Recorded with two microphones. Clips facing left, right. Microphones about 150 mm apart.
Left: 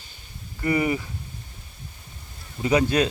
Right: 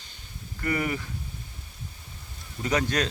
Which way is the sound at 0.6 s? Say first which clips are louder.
Left 5 dB; 15° left (ahead or behind).